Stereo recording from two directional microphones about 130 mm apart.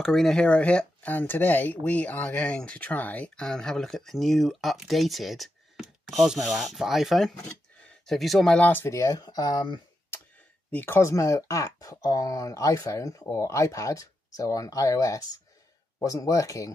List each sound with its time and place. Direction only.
0.0 s speech: 5° left (ahead or behind); by 9.8 s 30° left (ahead or behind)
10.7 s speech: 15° left (ahead or behind)